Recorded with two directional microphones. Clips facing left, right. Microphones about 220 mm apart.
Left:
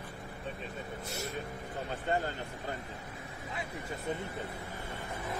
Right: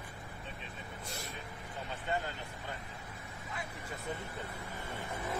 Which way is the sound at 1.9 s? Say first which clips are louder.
Left 4 dB; 45° left (ahead or behind).